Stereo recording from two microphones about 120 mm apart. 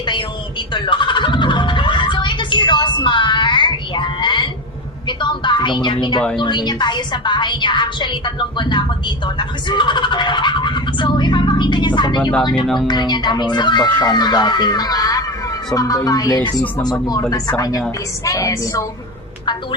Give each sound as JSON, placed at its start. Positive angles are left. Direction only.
{"t": 0.0, "sound": "speech", "side_deg": 40}
{"t": 0.7, "sound": "music", "side_deg": 40}
{"t": 5.0, "sound": "a sound", "side_deg": 40}
{"t": 6.4, "sound": "a woman's voice", "side_deg": 40}
{"t": 12.6, "sound": "speech", "side_deg": 0}
{"t": 12.9, "sound": "a woman's voice", "side_deg": 35}